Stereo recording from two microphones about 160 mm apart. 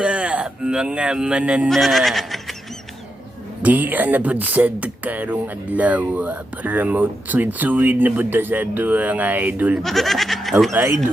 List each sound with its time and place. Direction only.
0.0 s speech: 5° right (ahead or behind)
3.6 s speech: 10° right (ahead or behind)
9.8 s speech: centre (ahead or behind)
10.7 s speech: 15° right (ahead or behind)